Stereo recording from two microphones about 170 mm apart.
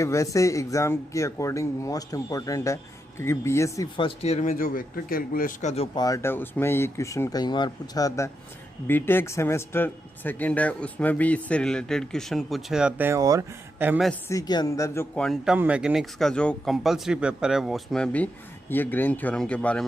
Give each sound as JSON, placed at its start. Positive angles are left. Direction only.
{"t": 0.0, "sound": "speech", "side_deg": 15}
{"t": 3.9, "sound": "speech", "side_deg": 35}
{"t": 6.0, "sound": "speech", "side_deg": 20}
{"t": 14.3, "sound": "speech", "side_deg": 20}
{"t": 15.1, "sound": "speech", "side_deg": 0}